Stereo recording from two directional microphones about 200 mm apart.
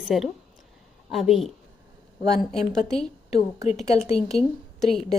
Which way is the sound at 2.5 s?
Centre (ahead or behind).